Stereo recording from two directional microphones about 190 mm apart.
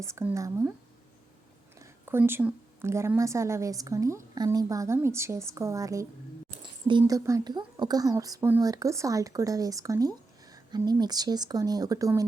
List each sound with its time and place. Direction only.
0.0 s a woman's voice: 15° right (ahead or behind)
1.8 s a woman's voice: 10° right (ahead or behind)